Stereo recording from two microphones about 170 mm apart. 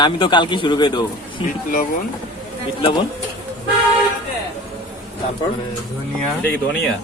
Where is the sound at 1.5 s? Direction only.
50° left (ahead or behind).